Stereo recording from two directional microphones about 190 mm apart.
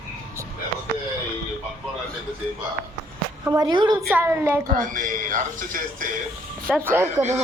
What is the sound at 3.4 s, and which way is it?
Speech, 20° right (ahead or behind).